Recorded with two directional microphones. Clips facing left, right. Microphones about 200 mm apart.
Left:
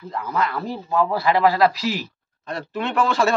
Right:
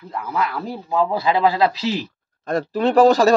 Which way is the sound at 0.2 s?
10° right (ahead or behind).